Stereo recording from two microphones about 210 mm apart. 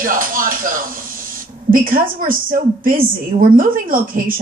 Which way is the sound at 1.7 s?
40° right (ahead or behind).